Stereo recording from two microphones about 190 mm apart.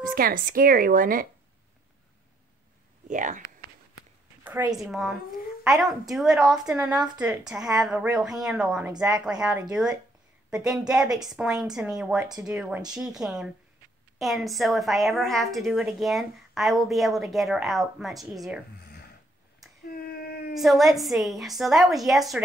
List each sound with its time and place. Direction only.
0.1 s a woman's voice: 50° right (ahead or behind)
3.1 s a woman's voice: 40° right (ahead or behind)
4.7 s a woman's voice: centre (ahead or behind)
19.9 s a sound: 50° left (ahead or behind)
20.5 s a woman's voice: centre (ahead or behind)